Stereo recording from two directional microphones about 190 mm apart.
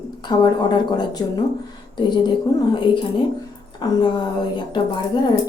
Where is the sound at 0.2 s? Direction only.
25° left (ahead or behind).